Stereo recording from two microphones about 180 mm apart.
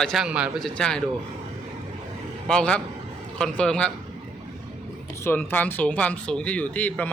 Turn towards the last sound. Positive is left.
turn(degrees=10)  # may be behind; listen again after turning